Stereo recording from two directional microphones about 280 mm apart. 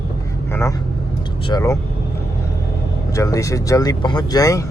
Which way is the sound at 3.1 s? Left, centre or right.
Centre.